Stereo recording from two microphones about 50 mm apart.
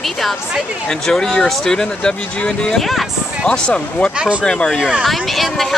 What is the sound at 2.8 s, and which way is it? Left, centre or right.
Speech, centre.